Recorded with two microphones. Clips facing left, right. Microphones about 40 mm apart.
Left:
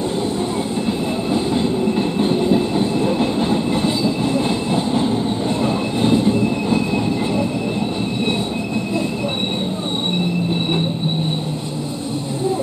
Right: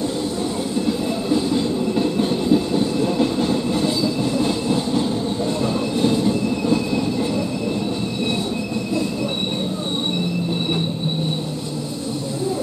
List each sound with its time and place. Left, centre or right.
0.8 s train: left